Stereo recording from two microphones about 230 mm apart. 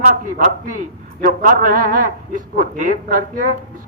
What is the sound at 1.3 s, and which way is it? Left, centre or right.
A man's voice, right.